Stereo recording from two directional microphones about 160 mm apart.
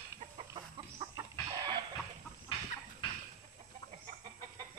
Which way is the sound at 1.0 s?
20° right (ahead or behind).